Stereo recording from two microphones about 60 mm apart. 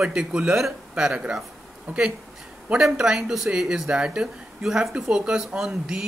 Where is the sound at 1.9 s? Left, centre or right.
Right.